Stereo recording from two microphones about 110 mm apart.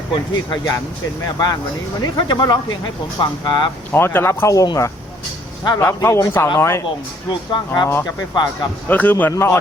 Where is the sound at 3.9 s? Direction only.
20° left (ahead or behind).